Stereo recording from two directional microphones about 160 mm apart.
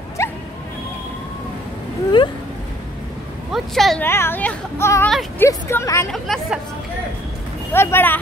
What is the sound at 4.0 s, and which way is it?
Speech, 15° left (ahead or behind).